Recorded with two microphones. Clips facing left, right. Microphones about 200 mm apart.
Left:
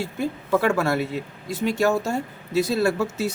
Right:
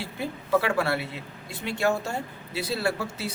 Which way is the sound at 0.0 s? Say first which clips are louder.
Left 6 dB; 45° left (ahead or behind).